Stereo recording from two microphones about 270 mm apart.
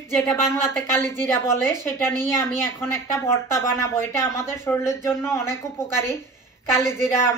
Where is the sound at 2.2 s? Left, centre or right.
Centre.